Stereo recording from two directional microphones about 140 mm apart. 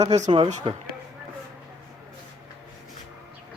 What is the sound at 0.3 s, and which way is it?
Speech, 35° right (ahead or behind).